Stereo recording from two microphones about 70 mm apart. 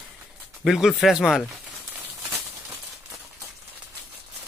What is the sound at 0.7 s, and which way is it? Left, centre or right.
Speech, centre.